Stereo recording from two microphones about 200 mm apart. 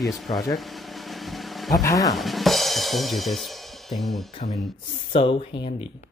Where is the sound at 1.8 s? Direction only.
15° left (ahead or behind).